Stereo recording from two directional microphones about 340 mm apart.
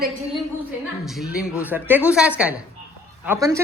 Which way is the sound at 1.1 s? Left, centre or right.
Centre.